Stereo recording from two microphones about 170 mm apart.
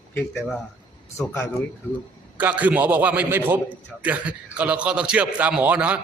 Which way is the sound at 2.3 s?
10° right (ahead or behind).